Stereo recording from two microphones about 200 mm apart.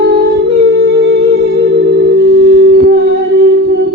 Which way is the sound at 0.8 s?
55° right (ahead or behind).